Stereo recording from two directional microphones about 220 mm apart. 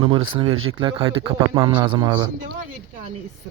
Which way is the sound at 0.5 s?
70° right (ahead or behind).